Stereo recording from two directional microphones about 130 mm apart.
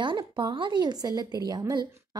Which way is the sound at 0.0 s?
40° right (ahead or behind).